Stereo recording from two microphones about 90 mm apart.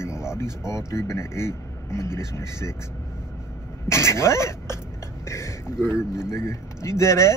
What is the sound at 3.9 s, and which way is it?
Speech, 30° left (ahead or behind).